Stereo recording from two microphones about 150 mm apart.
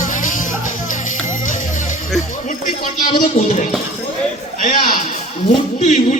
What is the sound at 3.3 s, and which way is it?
Speech, 55° left (ahead or behind).